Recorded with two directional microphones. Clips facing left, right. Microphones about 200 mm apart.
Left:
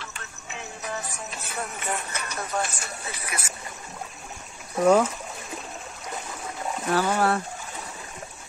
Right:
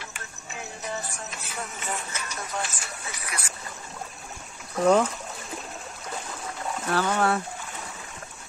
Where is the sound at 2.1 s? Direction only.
60° left (ahead or behind).